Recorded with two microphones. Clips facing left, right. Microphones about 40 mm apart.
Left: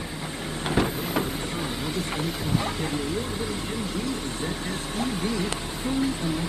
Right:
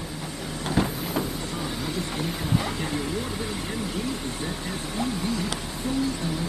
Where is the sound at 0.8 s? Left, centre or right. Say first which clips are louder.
Left 1 dB; left.